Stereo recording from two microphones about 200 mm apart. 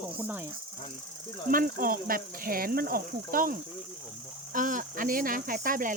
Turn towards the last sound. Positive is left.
turn(degrees=-45)  # may be behind; listen again after turning